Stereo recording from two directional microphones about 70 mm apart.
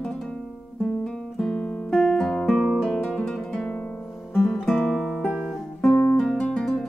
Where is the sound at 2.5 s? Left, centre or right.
Centre.